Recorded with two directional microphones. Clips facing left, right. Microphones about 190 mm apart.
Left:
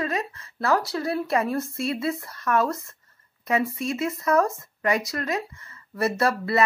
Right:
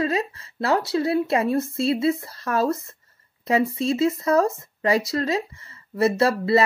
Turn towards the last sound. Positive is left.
turn(degrees=-25)  # may be behind; listen again after turning